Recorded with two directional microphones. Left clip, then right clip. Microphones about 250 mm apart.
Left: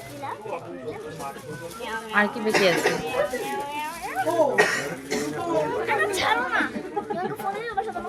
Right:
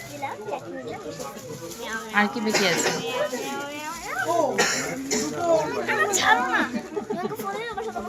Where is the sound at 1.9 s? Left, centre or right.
Centre.